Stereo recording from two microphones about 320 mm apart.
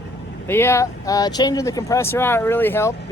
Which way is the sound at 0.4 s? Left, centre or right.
Centre.